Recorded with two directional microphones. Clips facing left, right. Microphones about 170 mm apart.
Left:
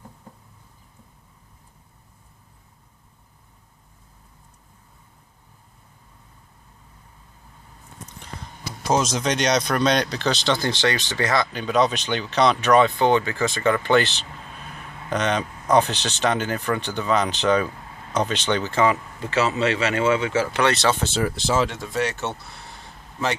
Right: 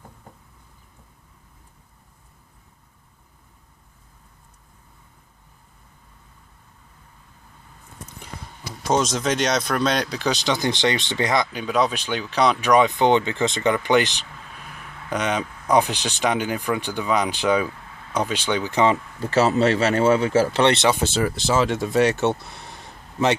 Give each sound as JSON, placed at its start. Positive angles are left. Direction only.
{"t": 8.9, "sound": "speech", "side_deg": 0}
{"t": 19.2, "sound": "speech", "side_deg": -35}
{"t": 21.1, "sound": "speech", "side_deg": -5}